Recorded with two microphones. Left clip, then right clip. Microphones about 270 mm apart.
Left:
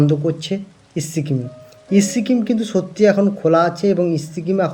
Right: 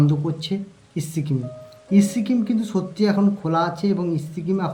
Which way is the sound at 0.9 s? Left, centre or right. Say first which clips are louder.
Left 5 dB; centre.